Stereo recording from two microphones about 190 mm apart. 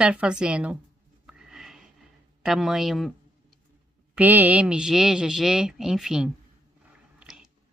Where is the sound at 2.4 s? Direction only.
Centre (ahead or behind).